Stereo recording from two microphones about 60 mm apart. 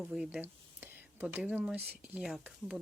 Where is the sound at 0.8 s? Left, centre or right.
Right.